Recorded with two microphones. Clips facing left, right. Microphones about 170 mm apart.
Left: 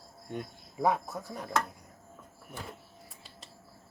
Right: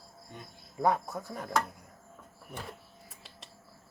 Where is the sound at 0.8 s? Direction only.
Centre (ahead or behind).